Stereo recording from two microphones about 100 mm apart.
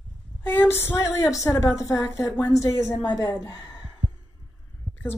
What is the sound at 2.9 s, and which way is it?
Speech, 45° left (ahead or behind).